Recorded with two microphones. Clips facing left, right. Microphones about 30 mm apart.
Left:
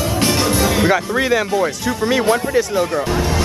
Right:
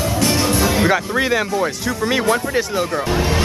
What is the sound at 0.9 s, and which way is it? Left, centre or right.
Speech, centre.